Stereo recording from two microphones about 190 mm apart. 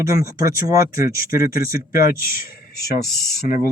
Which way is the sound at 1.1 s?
50° left (ahead or behind).